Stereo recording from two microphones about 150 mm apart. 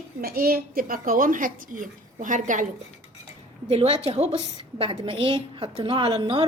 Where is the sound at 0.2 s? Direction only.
90° right; by 2.6 s 60° right (ahead or behind).